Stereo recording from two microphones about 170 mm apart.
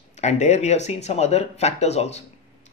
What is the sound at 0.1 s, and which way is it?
A man's voice, 40° left (ahead or behind).